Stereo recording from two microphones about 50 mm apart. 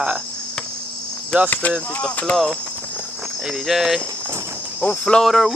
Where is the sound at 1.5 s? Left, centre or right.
Left.